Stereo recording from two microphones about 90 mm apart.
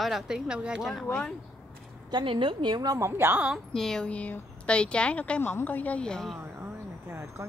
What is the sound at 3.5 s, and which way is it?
Speech, 5° left (ahead or behind).